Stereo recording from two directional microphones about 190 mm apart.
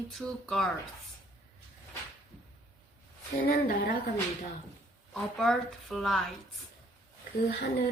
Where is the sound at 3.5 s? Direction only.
50° left (ahead or behind).